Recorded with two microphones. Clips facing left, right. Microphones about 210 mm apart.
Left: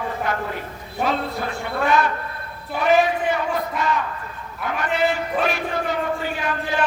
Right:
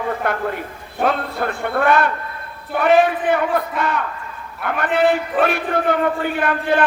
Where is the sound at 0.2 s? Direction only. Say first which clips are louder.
Right 4 dB; 55° right (ahead or behind).